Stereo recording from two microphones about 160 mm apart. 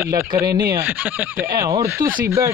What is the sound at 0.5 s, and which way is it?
Speech, 70° right (ahead or behind).